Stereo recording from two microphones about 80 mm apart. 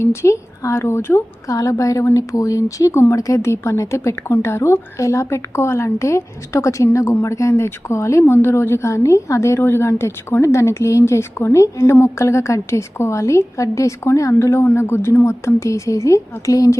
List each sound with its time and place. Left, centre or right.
0.0 s a woman's voice: left